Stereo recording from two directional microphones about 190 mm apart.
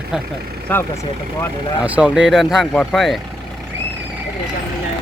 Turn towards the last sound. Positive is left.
turn(degrees=0)  # may be behind; listen again after turning